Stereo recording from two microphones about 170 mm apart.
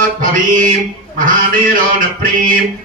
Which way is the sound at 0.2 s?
50° right (ahead or behind).